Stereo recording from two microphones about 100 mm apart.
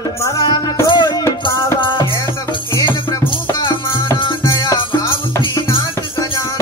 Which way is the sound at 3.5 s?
50° left (ahead or behind).